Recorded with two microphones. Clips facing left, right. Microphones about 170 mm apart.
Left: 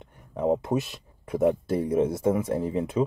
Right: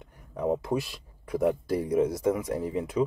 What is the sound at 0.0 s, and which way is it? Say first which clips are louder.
Speech: left 3 dB; 25° left (ahead or behind).